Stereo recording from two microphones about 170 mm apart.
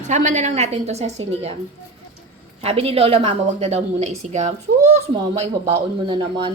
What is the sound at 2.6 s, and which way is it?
A woman's voice, 35° right (ahead or behind).